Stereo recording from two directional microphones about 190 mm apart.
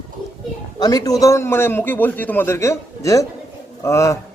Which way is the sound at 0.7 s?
20° left (ahead or behind).